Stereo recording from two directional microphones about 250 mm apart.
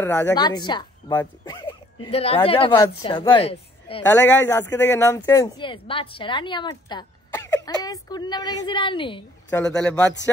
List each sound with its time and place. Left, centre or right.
0.0 s a woman's voice: centre
9.6 s a man's voice: centre